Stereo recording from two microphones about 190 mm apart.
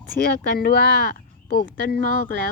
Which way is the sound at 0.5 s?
55° left (ahead or behind).